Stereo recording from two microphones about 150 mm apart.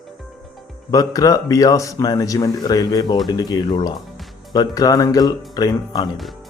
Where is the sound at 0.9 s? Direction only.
25° left (ahead or behind).